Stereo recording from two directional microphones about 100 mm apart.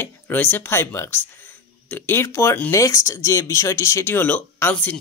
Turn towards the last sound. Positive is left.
turn(degrees=15)  # may be behind; listen again after turning